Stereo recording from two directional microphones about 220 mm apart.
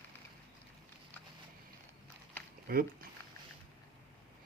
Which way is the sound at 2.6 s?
40° right (ahead or behind).